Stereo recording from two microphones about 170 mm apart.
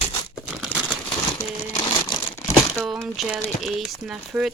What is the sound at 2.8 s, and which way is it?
Speech, centre (ahead or behind).